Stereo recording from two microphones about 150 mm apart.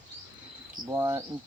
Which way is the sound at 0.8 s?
20° right (ahead or behind).